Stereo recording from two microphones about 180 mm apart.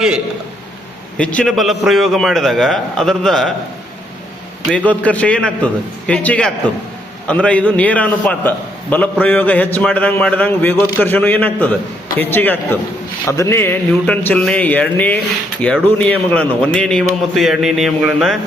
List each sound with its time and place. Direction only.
1.2 s a man's voice: 5° left (ahead or behind)
4.9 s a man's voice: 10° left (ahead or behind)